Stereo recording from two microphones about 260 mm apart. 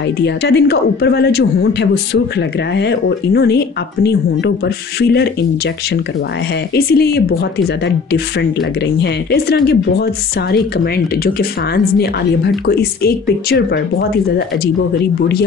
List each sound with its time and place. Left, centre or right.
0.2 s speech: left
6.7 s speech: left
11.2 s speech: left